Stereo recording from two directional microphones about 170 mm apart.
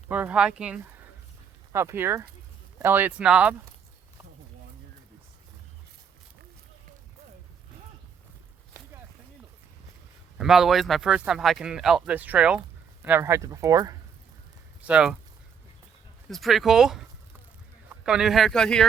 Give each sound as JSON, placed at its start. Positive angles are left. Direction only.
{"t": 0.1, "sound": "speech", "side_deg": -10}
{"t": 10.3, "sound": "speech", "side_deg": -5}
{"t": 14.8, "sound": "speech", "side_deg": -5}
{"t": 16.3, "sound": "speech", "side_deg": 0}
{"t": 18.0, "sound": "speech", "side_deg": -5}